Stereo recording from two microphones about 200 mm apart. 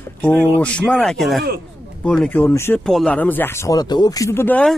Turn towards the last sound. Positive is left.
turn(degrees=10)  # may be behind; listen again after turning